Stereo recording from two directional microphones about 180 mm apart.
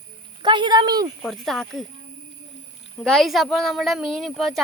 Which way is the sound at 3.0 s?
Centre (ahead or behind).